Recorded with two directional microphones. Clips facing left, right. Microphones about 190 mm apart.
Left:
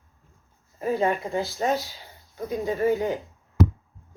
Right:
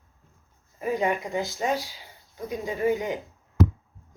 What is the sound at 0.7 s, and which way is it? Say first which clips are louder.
A woman's voice: left 2 dB; 15° right (ahead or behind).